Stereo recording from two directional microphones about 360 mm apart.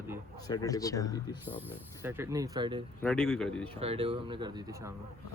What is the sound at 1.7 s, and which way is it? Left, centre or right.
Speech, centre.